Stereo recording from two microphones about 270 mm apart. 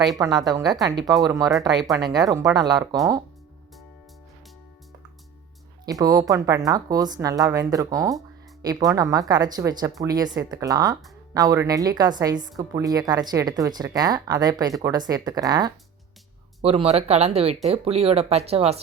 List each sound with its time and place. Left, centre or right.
0.2 s a woman's voice: centre
1.5 s speech: centre
2.0 s a woman's voice: centre
5.8 s a woman's voice: centre